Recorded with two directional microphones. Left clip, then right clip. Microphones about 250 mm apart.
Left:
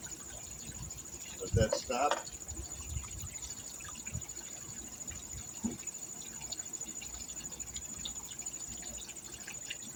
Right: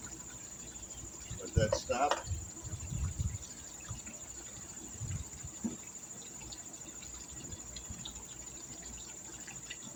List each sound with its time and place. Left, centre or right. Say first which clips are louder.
1.5 s speech: even; centre
5.6 s rodents: left 1 dB; left